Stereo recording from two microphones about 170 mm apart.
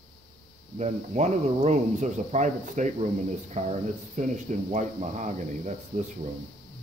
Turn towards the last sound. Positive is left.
turn(degrees=-45)  # may be behind; listen again after turning